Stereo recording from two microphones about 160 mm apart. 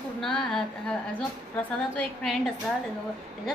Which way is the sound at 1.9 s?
5° left (ahead or behind).